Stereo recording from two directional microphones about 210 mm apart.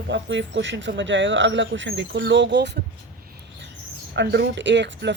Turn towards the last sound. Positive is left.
turn(degrees=-55)  # may be behind; listen again after turning